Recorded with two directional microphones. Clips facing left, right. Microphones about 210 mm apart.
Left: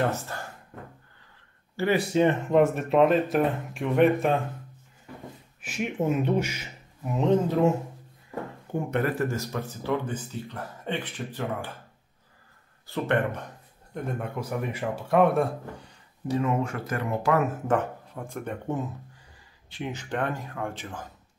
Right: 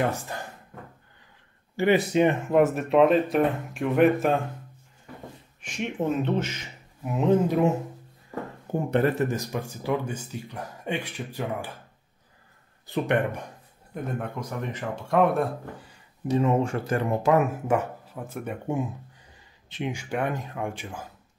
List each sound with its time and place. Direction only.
0.1 s speech: 15° right (ahead or behind)
1.8 s speech: 20° right (ahead or behind)
2.5 s speech: centre (ahead or behind)
5.6 s speech: 5° left (ahead or behind)
7.1 s speech: 5° right (ahead or behind)
8.9 s speech: 25° right (ahead or behind)
12.8 s speech: 15° right (ahead or behind)
13.9 s speech: centre (ahead or behind)
16.3 s speech: 25° right (ahead or behind)
17.6 s speech: 5° right (ahead or behind)